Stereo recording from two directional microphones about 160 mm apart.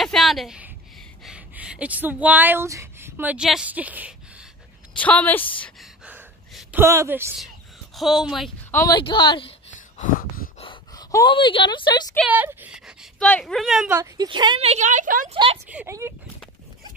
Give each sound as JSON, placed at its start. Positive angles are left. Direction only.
{"t": 0.0, "sound": "a sound", "side_deg": 0}
{"t": 1.2, "sound": "speech", "side_deg": -5}
{"t": 4.9, "sound": "speech", "side_deg": 10}
{"t": 6.0, "sound": "a sound", "side_deg": -10}
{"t": 7.9, "sound": "speech", "side_deg": 0}
{"t": 8.9, "sound": "speech", "side_deg": 30}
{"t": 9.8, "sound": "a sound", "side_deg": 55}
{"t": 10.6, "sound": "a sound", "side_deg": 30}
{"t": 11.1, "sound": "speech", "side_deg": 20}
{"t": 11.3, "sound": "speech", "side_deg": 30}
{"t": 12.3, "sound": "speech", "side_deg": -10}
{"t": 13.9, "sound": "speech", "side_deg": -25}
{"t": 15.3, "sound": "speech", "side_deg": -35}
{"t": 15.7, "sound": "speech", "side_deg": -15}